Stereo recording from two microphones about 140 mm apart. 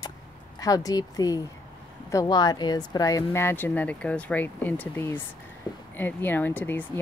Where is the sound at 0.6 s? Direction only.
25° left (ahead or behind).